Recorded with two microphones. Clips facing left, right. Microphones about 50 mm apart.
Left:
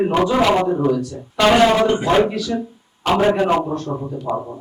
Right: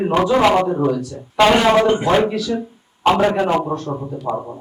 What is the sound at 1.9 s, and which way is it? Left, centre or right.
Speech, centre.